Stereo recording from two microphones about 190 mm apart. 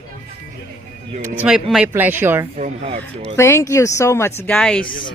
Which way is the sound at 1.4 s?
5° right (ahead or behind).